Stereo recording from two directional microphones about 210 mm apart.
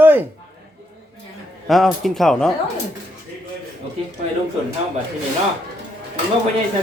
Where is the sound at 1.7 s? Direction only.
Centre (ahead or behind).